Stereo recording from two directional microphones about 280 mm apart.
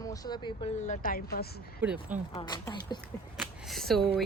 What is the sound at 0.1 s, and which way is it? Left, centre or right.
Speech, centre.